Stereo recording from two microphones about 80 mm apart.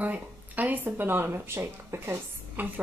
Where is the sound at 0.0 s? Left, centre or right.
Centre.